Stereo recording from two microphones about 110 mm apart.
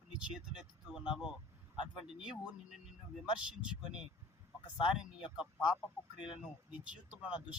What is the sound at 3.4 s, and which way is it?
Speech, 10° right (ahead or behind).